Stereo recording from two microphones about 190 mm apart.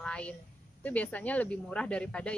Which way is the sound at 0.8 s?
10° left (ahead or behind).